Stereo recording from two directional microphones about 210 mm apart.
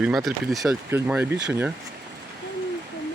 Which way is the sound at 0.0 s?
Centre (ahead or behind).